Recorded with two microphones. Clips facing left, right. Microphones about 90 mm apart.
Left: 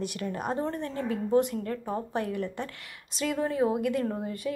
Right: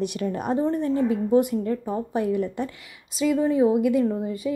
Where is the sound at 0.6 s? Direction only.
10° right (ahead or behind).